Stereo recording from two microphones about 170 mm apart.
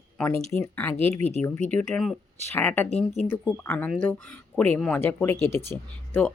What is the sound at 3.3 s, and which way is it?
A woman's voice, 10° left (ahead or behind).